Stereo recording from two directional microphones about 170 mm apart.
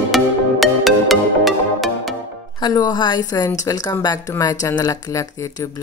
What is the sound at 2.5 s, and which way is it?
A woman's voice, 25° left (ahead or behind).